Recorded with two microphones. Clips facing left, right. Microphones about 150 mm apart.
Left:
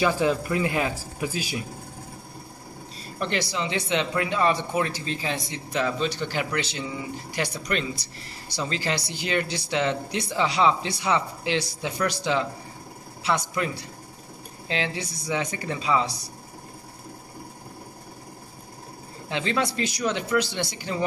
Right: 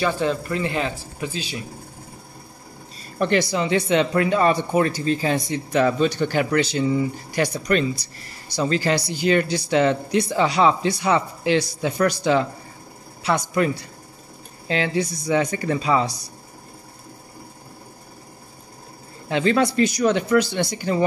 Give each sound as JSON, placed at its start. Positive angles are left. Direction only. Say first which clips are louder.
{"t": 0.0, "sound": "speech", "louder": "even", "side_deg": 10}
{"t": 3.2, "sound": "speech", "louder": "right 7 dB", "side_deg": -50}
{"t": 14.7, "sound": "speech", "louder": "right 7 dB", "side_deg": -50}
{"t": 19.2, "sound": "speech", "louder": "right 7 dB", "side_deg": -50}